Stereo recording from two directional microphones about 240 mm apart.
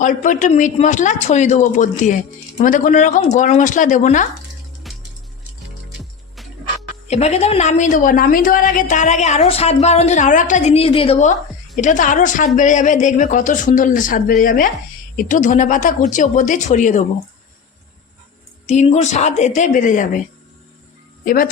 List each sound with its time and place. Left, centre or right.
0.0 s a man's voice: left
4.9 s music: centre
7.1 s a woman's voice: left
18.6 s a woman's voice: left
21.2 s a man's voice: left